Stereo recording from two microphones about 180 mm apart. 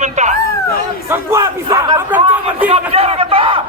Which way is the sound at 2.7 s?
35° right (ahead or behind).